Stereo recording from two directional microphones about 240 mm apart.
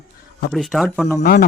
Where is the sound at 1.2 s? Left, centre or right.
Left.